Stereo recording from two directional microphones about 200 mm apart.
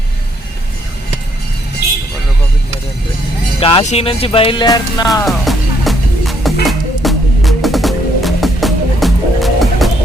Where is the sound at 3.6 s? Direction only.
30° left (ahead or behind).